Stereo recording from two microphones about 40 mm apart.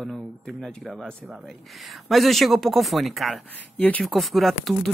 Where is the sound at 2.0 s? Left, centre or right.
Centre.